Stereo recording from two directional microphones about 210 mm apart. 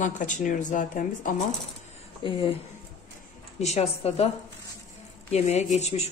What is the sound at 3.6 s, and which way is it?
Speech, 30° left (ahead or behind).